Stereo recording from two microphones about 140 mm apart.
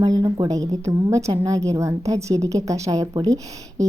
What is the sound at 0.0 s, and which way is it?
A woman's voice, 30° right (ahead or behind).